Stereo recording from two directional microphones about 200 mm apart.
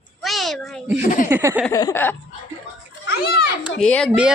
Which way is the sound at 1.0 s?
40° left (ahead or behind).